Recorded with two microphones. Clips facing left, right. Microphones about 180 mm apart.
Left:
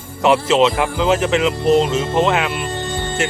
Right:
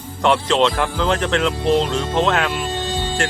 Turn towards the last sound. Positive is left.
turn(degrees=5)  # may be behind; listen again after turning